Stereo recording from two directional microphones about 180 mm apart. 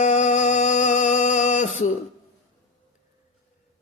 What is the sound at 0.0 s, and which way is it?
Music, 40° left (ahead or behind).